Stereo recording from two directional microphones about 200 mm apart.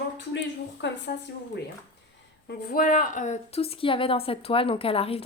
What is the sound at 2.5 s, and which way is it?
A woman's voice, 50° left (ahead or behind).